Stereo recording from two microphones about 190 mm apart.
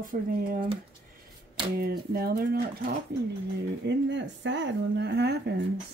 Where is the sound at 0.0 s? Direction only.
45° right (ahead or behind).